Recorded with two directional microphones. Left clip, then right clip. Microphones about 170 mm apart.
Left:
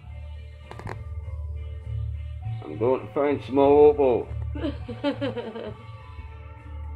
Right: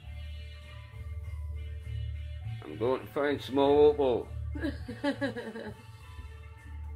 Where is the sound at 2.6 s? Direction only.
5° right (ahead or behind).